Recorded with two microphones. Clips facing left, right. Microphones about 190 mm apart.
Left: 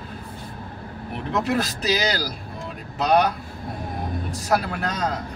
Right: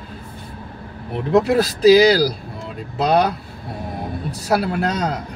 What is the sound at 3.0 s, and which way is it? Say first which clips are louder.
Speech: right 3 dB; 30° right (ahead or behind).